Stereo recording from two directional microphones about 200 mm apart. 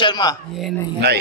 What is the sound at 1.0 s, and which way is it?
Speech, 55° right (ahead or behind).